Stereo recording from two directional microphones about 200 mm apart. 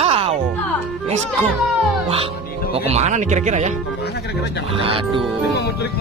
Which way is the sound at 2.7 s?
30° right (ahead or behind).